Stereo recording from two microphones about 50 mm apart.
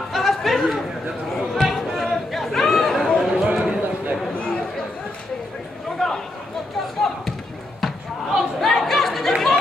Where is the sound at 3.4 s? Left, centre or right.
Centre.